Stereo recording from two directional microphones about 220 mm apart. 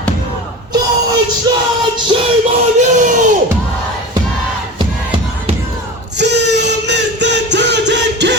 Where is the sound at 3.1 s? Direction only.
35° right (ahead or behind).